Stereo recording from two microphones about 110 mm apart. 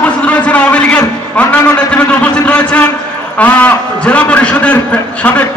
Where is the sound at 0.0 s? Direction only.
10° left (ahead or behind).